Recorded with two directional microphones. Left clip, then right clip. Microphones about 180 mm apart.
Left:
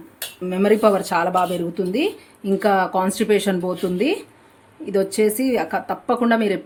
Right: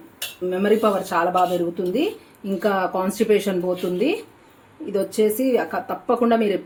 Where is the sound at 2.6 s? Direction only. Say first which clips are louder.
Left 3 dB; 25° left (ahead or behind).